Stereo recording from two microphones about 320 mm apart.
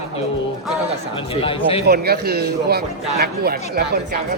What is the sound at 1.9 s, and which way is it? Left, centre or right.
A man's voice, right.